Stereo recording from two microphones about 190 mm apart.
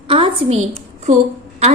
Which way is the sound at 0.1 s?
30° right (ahead or behind).